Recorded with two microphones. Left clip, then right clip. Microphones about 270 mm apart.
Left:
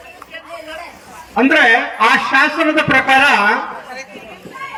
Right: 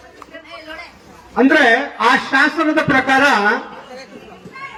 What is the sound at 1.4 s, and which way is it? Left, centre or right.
Speech, right.